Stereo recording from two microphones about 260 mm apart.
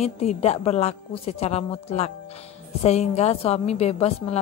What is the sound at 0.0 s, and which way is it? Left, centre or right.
A woman's voice, left.